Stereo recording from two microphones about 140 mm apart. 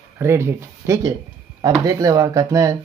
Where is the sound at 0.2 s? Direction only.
20° right (ahead or behind).